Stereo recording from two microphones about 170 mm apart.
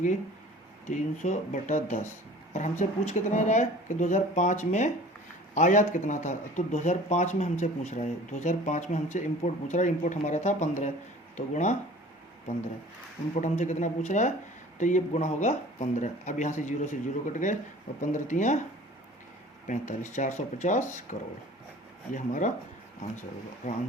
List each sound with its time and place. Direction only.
0.9 s speech: 45° left (ahead or behind)
13.3 s speech: 45° left (ahead or behind)
19.6 s speech: 45° left (ahead or behind)